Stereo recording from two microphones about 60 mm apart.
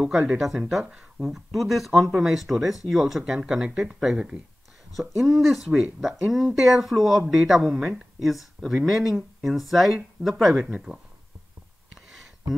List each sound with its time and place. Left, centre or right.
0.0 s speech: centre
1.5 s speech: centre
12.1 s a sound: centre